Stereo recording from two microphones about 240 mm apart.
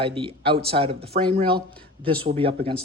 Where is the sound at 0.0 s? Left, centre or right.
Right.